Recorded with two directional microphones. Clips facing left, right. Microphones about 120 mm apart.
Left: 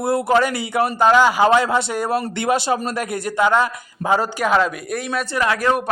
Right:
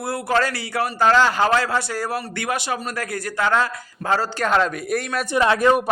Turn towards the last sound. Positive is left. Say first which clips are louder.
# right 2 dB
turn(degrees=-5)  # may be behind; listen again after turning